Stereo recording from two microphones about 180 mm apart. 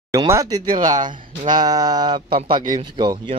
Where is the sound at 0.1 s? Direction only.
20° right (ahead or behind).